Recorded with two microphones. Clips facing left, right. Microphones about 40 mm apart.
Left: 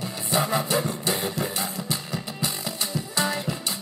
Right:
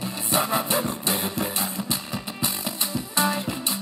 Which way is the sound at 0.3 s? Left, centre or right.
Right.